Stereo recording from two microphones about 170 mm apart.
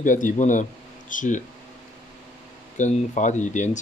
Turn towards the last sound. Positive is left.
turn(degrees=45)  # may be behind; listen again after turning